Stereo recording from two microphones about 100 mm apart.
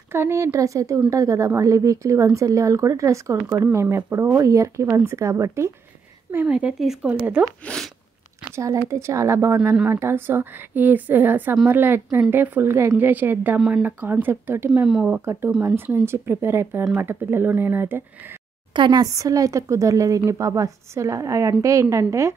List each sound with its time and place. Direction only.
0.1 s a woman's voice: 25° right (ahead or behind)
6.4 s speech: 10° right (ahead or behind)
7.6 s a sound: 5° left (ahead or behind)
8.5 s speech: 30° right (ahead or behind)
13.6 s speech: 5° right (ahead or behind)
13.8 s speech: 20° right (ahead or behind)
14.7 s speech: 5° right (ahead or behind)
15.6 s speech: 20° right (ahead or behind)
18.7 s a woman's voice: 50° right (ahead or behind); by 22.3 s 30° right (ahead or behind)